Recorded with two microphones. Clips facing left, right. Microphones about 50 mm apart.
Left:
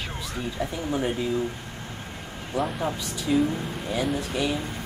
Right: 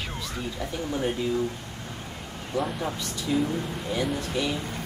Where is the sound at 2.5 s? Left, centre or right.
Centre.